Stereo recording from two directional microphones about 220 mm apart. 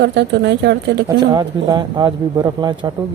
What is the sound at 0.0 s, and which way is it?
A woman's voice, 50° right (ahead or behind).